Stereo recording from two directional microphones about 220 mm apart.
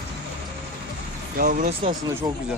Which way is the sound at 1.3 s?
40° right (ahead or behind).